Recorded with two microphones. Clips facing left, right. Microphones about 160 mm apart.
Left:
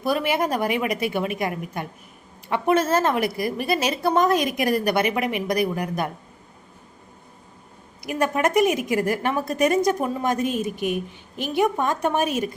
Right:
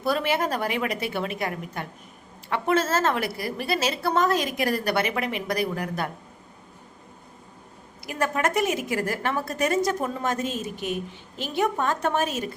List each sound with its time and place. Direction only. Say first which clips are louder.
0.0 s a woman's voice: left 2 dB; 15° left (ahead or behind)
8.0 s a woman's voice: left 3 dB; 15° left (ahead or behind)